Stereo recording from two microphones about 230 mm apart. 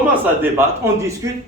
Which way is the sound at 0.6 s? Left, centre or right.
Centre.